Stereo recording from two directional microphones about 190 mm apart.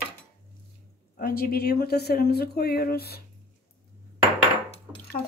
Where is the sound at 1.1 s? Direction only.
50° left (ahead or behind).